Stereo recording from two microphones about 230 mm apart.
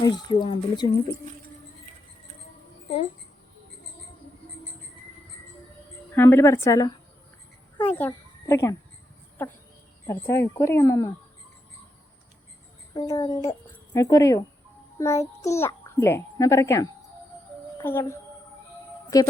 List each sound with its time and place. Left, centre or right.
0.0 s speech: centre
6.1 s a child's voice: centre
10.1 s a child's voice: centre
12.9 s speech: centre
14.9 s child singing: centre
15.4 s a child's voice: centre